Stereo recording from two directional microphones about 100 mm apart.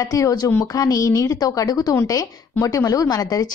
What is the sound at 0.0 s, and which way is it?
A woman's voice, 35° left (ahead or behind).